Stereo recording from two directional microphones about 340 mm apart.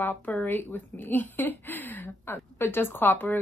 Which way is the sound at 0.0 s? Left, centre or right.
Centre.